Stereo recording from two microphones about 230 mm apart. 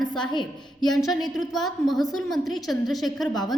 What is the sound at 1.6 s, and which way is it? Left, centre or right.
A woman's voice, centre.